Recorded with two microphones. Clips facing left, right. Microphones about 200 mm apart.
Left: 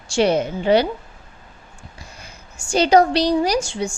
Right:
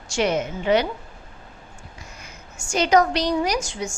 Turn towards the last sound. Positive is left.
turn(degrees=30)  # may be behind; listen again after turning